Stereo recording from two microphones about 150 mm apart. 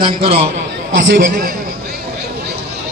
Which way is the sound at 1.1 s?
65° right (ahead or behind).